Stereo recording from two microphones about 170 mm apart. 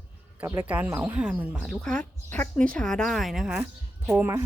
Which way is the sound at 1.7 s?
5° left (ahead or behind).